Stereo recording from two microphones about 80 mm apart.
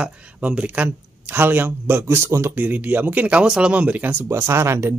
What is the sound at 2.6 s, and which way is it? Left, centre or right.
Speech, right.